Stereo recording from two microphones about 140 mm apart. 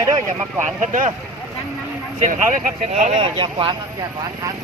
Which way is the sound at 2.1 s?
60° right (ahead or behind).